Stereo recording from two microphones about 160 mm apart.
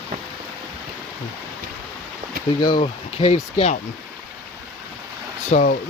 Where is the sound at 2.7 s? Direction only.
40° left (ahead or behind).